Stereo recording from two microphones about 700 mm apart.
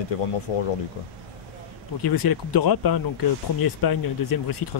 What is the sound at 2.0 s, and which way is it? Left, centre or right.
Speech, left.